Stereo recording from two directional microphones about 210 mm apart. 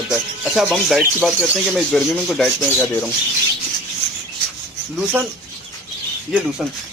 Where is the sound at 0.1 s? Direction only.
Centre (ahead or behind).